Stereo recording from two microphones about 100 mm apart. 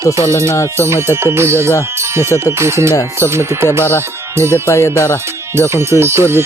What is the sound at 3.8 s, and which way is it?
Speech, 25° left (ahead or behind).